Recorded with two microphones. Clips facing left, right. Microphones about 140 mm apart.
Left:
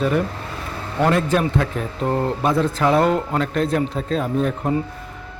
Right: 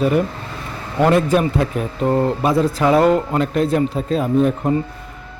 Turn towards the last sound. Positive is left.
turn(degrees=0)  # may be behind; listen again after turning